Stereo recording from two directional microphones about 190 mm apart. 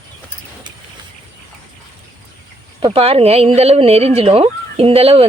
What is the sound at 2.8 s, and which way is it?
Speech, 30° right (ahead or behind).